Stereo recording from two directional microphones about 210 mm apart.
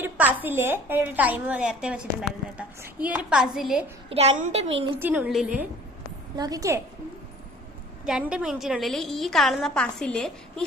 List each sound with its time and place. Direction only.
0.0 s a woman's voice: 10° right (ahead or behind)
4.1 s a child's voice: 30° right (ahead or behind)
4.9 s a woman's voice: 10° right (ahead or behind)
6.3 s a woman's voice: 15° right (ahead or behind)
8.0 s a woman's voice: 5° right (ahead or behind)